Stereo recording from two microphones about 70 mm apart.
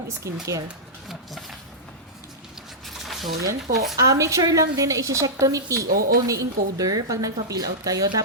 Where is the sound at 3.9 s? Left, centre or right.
Right.